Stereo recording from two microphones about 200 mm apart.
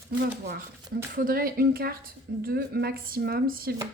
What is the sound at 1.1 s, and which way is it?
A woman's voice, 45° right (ahead or behind).